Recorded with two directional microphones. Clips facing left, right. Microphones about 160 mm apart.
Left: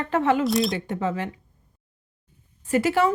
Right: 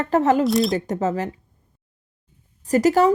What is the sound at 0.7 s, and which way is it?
Speech, 40° right (ahead or behind).